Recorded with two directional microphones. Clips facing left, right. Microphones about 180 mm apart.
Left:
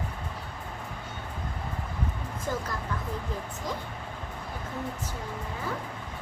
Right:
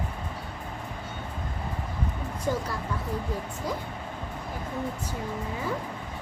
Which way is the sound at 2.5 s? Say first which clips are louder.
Right 4 dB; 15° right (ahead or behind).